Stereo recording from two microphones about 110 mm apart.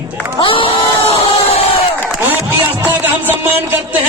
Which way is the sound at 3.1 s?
20° right (ahead or behind).